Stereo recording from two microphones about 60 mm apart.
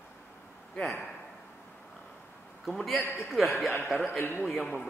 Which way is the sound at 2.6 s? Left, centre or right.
Centre.